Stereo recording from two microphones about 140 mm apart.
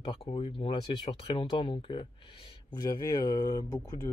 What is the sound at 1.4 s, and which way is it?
Speech, 35° left (ahead or behind).